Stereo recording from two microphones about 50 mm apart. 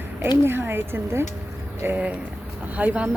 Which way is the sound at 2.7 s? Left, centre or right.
Right.